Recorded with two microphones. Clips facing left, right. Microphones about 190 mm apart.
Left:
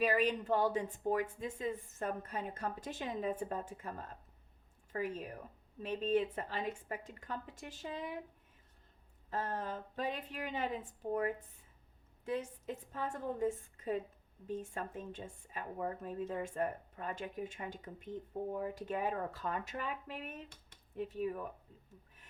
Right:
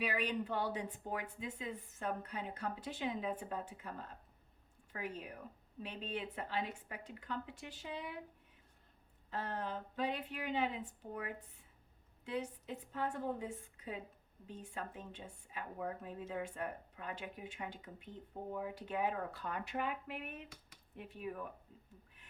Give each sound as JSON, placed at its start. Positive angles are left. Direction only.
{"t": 0.0, "sound": "speech", "side_deg": 45}
{"t": 9.3, "sound": "speech", "side_deg": 45}
{"t": 12.2, "sound": "speech", "side_deg": 45}